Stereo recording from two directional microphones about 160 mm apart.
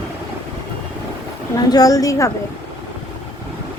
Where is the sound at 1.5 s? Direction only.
20° left (ahead or behind).